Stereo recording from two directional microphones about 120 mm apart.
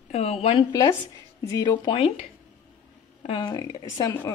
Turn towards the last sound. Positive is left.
turn(degrees=30)  # may be behind; listen again after turning